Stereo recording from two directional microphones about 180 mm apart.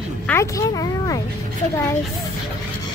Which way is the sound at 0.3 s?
15° left (ahead or behind).